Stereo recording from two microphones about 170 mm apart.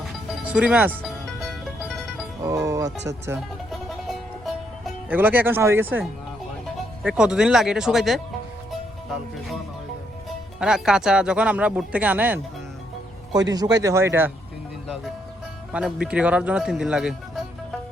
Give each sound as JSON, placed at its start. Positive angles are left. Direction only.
{"t": 0.3, "sound": "music", "side_deg": -5}
{"t": 2.4, "sound": "speech", "side_deg": -20}
{"t": 3.7, "sound": "music", "side_deg": 0}
{"t": 5.0, "sound": "speech", "side_deg": -10}
{"t": 7.0, "sound": "speech", "side_deg": -5}
{"t": 10.6, "sound": "speech", "side_deg": -5}
{"t": 13.5, "sound": "speech", "side_deg": -20}
{"t": 15.7, "sound": "speech", "side_deg": -5}